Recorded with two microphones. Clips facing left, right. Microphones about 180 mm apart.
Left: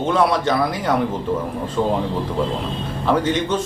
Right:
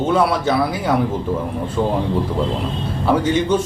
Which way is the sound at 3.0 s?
10° right (ahead or behind).